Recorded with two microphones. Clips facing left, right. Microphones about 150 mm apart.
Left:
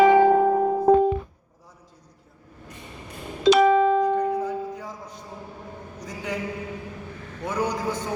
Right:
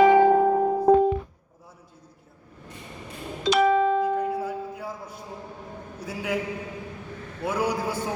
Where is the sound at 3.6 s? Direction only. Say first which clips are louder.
Even; 90° left.